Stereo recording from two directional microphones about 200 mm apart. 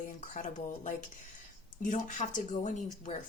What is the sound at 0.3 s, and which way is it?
Speech, 40° left (ahead or behind).